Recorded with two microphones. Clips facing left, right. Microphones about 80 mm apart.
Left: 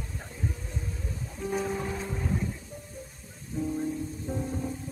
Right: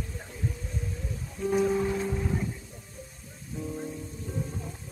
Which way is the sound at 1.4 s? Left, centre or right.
Centre.